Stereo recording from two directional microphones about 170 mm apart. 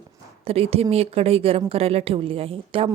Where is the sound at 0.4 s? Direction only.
35° right (ahead or behind).